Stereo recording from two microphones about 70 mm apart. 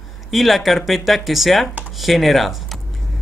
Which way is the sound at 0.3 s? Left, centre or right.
Centre.